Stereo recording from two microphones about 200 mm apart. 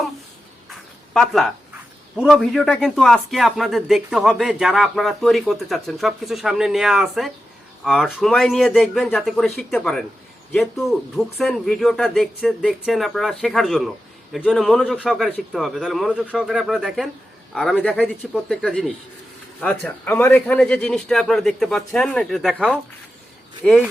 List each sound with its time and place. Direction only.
0.7 s speech: centre (ahead or behind)